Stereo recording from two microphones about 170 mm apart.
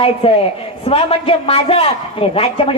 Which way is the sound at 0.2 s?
35° left (ahead or behind).